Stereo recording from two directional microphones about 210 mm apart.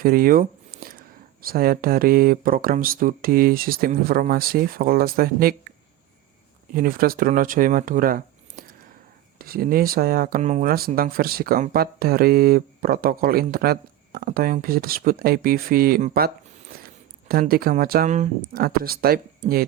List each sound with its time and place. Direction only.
0.0 s a sound: 45° right (ahead or behind)
1.4 s speech: 45° right (ahead or behind)
6.7 s speech: 45° right (ahead or behind)